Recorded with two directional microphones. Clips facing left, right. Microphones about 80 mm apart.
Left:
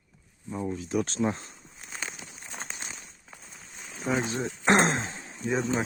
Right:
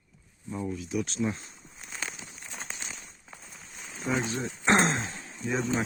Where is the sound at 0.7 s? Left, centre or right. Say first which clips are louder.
Left 4 dB; left.